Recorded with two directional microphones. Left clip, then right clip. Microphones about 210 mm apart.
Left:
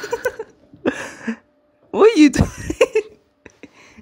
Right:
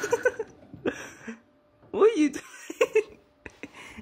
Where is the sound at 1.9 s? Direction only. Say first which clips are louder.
Left 10 dB; 25° left (ahead or behind).